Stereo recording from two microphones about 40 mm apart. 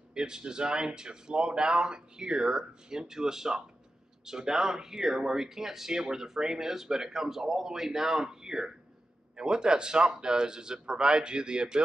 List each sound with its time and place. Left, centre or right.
0.1 s speech: centre